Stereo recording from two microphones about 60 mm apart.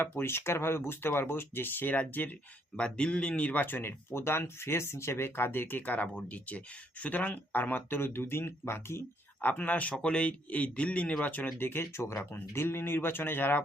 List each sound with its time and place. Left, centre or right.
0.0 s speech: left
2.7 s speech: centre; by 9.0 s left
9.4 s speech: left
11.5 s speech: left